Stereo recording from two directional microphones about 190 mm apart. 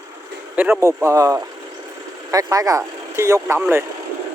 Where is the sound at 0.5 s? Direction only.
10° right (ahead or behind).